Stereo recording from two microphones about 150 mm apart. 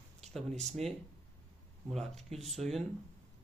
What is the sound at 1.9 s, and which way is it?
Speech, centre (ahead or behind).